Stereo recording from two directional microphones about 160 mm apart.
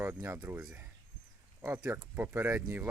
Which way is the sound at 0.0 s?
15° right (ahead or behind).